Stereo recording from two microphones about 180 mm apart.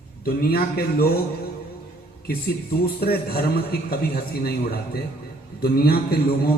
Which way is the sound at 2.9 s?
60° left (ahead or behind).